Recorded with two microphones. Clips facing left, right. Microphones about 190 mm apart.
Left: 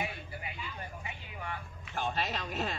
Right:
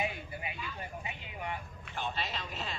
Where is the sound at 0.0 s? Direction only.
20° right (ahead or behind).